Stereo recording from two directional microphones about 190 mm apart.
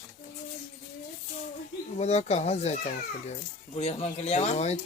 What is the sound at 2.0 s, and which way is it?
Speech, 35° left (ahead or behind).